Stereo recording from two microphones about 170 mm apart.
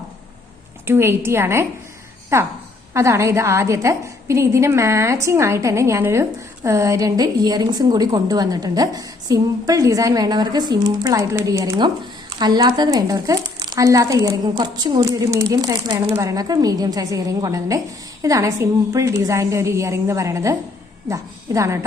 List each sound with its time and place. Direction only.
0.9 s a woman's voice: 15° right (ahead or behind)